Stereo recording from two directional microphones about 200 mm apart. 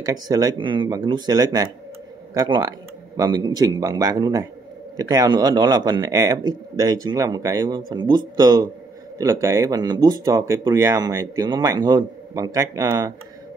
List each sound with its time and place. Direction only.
0.0 s speech: 20° right (ahead or behind)